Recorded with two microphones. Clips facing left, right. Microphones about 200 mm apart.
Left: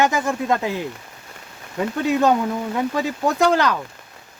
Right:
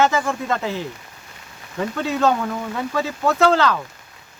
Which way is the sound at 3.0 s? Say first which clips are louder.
Right 3 dB; 15° left (ahead or behind).